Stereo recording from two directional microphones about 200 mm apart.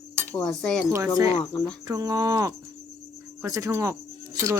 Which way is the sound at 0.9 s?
15° right (ahead or behind).